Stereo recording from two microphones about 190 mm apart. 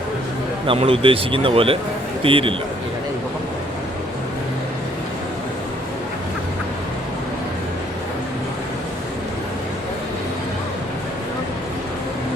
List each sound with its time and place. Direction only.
0.7 s speech: 30° right (ahead or behind)